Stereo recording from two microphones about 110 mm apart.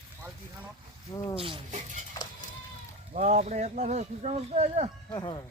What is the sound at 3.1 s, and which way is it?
Speech, 90° right.